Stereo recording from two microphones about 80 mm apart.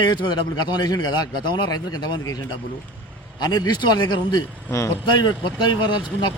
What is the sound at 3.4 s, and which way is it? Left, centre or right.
A man's voice, left.